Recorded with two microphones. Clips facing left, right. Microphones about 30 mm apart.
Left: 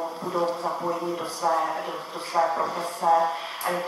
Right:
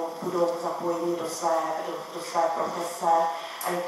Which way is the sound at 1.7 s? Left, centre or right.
Left.